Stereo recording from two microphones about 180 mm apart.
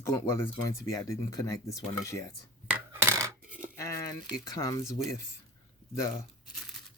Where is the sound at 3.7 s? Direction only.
15° left (ahead or behind).